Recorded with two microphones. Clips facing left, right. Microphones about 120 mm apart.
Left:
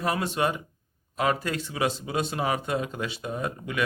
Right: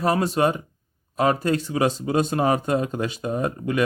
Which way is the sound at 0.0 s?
40° right (ahead or behind).